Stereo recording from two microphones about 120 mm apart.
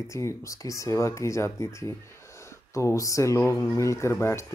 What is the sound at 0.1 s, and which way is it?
Speech, 25° left (ahead or behind).